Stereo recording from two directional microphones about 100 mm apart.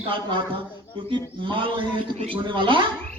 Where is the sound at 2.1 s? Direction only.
90° right.